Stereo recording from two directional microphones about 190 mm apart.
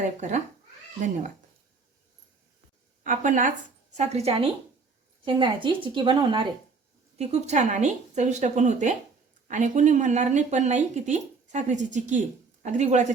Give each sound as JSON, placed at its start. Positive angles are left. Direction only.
{"t": 0.2, "sound": "speech", "side_deg": -40}
{"t": 3.0, "sound": "a woman's voice", "side_deg": -40}
{"t": 7.2, "sound": "speech", "side_deg": -35}